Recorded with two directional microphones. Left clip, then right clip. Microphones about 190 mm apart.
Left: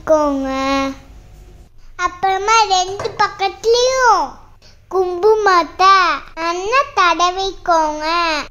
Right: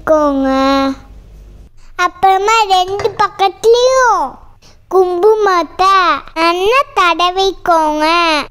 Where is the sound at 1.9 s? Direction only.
45° right (ahead or behind).